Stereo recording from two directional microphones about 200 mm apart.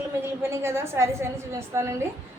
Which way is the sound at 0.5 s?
15° right (ahead or behind).